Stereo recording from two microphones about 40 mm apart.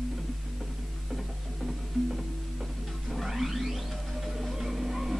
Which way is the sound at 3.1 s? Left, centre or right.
Centre.